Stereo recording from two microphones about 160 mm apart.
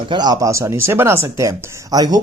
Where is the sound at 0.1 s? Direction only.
25° right (ahead or behind).